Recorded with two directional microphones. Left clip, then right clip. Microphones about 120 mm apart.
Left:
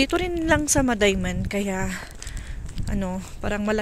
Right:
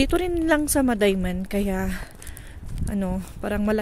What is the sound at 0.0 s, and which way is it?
Speech, 45° right (ahead or behind).